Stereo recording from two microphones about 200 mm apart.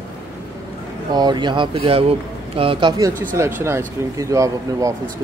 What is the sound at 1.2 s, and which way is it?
A man's voice, 20° right (ahead or behind).